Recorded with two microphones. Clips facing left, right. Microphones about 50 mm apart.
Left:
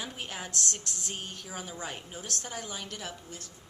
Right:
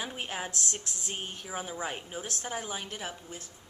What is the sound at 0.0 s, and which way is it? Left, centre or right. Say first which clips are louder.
Speech: right 3 dB; centre.